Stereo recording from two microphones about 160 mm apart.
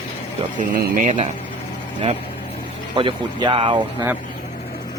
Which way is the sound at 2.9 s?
30° right (ahead or behind).